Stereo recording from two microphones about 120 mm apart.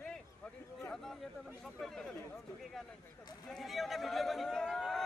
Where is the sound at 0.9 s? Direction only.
Centre (ahead or behind).